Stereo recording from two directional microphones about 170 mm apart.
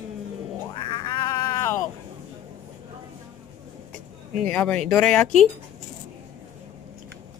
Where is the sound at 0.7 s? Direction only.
25° left (ahead or behind).